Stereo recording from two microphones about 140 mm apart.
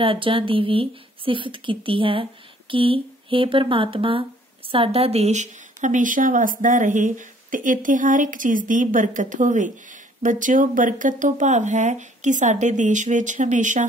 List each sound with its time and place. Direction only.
0.0 s speech: 40° right (ahead or behind); by 13.8 s 60° right (ahead or behind)